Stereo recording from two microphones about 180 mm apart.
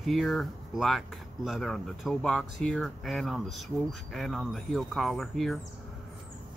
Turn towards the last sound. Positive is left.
turn(degrees=0)  # may be behind; listen again after turning